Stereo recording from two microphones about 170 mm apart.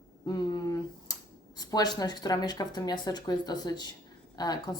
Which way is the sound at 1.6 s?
25° left (ahead or behind).